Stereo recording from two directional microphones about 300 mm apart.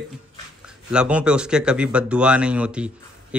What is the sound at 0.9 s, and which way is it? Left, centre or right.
Speech, centre.